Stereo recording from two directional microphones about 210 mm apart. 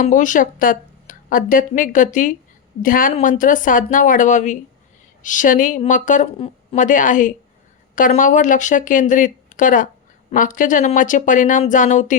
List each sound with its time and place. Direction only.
0.0 s speech: 40° left (ahead or behind)